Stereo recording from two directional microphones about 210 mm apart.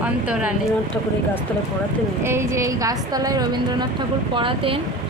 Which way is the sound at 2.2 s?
10° right (ahead or behind).